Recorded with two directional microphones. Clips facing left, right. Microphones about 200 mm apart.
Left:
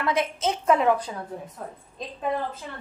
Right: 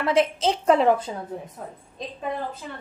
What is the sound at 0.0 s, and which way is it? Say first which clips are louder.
A woman's voice: right 4 dB; 30° right (ahead or behind).